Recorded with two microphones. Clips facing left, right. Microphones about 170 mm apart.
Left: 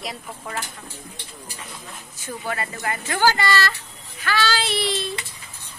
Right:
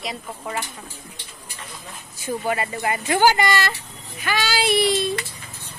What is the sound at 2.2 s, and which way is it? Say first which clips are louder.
Speech: right 5 dB; 15° right (ahead or behind).